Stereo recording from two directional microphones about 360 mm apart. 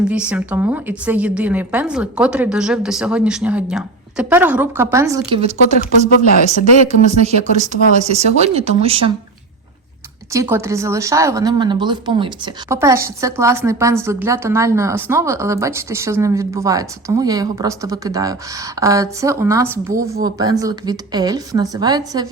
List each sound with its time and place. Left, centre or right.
0.1 s a woman's voice: centre
6.8 s a woman's voice: centre
10.3 s a woman's voice: centre